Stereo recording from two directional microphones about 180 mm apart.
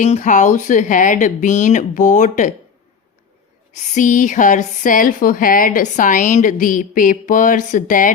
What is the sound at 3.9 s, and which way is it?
Speech, 45° left (ahead or behind).